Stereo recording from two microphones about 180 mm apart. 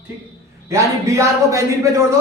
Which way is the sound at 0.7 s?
15° right (ahead or behind).